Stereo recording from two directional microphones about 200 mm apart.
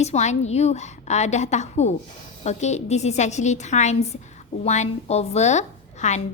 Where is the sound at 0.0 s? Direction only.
35° left (ahead or behind).